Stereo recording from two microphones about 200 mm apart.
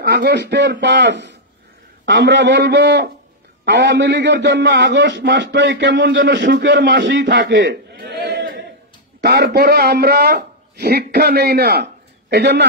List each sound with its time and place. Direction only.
0.0 s a man's voice: 55° right (ahead or behind)